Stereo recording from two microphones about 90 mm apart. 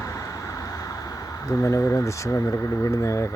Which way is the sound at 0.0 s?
35° left (ahead or behind).